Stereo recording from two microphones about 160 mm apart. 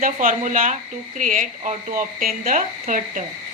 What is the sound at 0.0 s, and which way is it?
A woman's voice, 55° right (ahead or behind).